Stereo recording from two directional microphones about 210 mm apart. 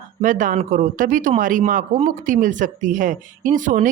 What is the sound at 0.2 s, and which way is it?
Speech, 40° right (ahead or behind).